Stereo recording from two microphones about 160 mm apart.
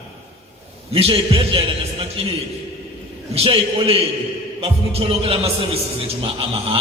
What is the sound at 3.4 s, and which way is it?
Mantra, 35° right (ahead or behind).